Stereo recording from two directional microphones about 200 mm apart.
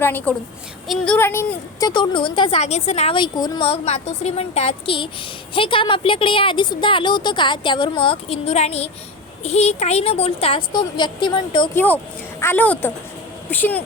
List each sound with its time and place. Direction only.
0.0 s a woman's voice: 10° left (ahead or behind)
1.9 s a woman's voice: 25° left (ahead or behind)
12.4 s speech: 10° left (ahead or behind)